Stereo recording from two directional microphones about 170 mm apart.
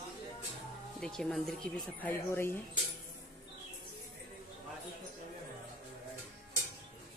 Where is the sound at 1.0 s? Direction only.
5° left (ahead or behind).